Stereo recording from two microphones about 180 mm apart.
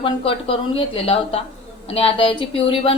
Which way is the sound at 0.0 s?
30° left (ahead or behind).